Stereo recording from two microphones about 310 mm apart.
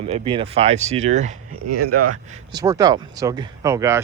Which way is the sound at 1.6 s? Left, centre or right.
Right.